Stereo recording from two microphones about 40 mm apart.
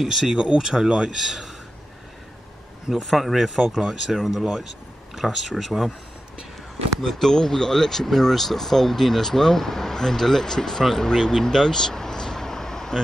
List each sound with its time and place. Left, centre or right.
0.0 s speech: centre
1.1 s speech: centre
2.9 s speech: centre
7.2 s speech: centre